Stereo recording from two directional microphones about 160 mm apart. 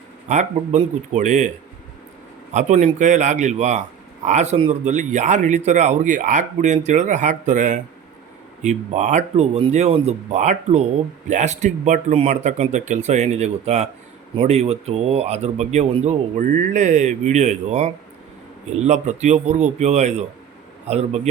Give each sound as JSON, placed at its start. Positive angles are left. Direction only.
{"t": 0.3, "sound": "speech", "side_deg": -45}
{"t": 2.5, "sound": "a man's voice", "side_deg": -45}